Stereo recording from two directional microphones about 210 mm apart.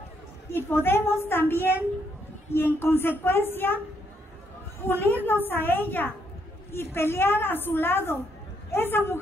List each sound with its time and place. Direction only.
0.5 s a woman's voice: 10° left (ahead or behind)
4.8 s a woman's voice: 10° left (ahead or behind)